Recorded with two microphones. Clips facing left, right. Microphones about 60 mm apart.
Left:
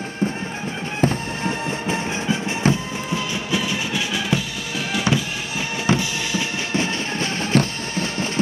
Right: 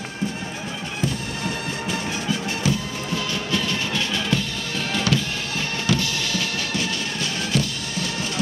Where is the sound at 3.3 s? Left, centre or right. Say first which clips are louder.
Even; centre.